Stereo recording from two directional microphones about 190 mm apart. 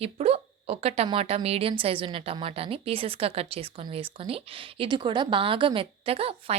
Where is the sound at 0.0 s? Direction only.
30° right (ahead or behind).